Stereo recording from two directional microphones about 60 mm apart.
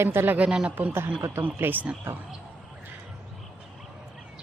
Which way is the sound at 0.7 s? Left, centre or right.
Right.